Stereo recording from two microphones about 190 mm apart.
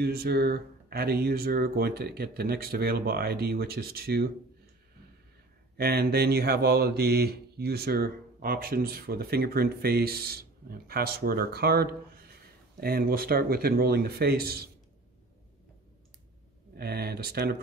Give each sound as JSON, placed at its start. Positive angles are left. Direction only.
{"t": 0.0, "sound": "speech", "side_deg": -55}
{"t": 5.8, "sound": "speech", "side_deg": -55}
{"t": 16.7, "sound": "speech", "side_deg": -55}